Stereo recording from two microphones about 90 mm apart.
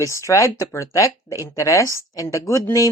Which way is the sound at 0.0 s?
35° left (ahead or behind).